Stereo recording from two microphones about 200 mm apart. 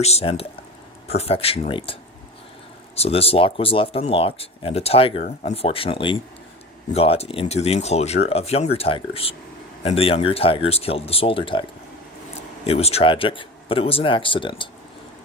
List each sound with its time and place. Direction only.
0.0 s speech: 30° left (ahead or behind)
12.6 s speech: 30° left (ahead or behind)